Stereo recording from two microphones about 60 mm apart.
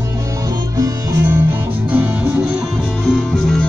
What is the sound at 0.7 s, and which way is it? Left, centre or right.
Music, right.